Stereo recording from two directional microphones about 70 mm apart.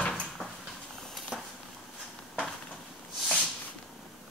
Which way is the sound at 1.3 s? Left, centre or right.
Centre.